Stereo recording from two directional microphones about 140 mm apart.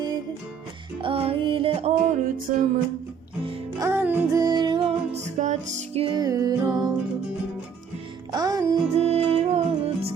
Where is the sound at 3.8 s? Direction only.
15° right (ahead or behind).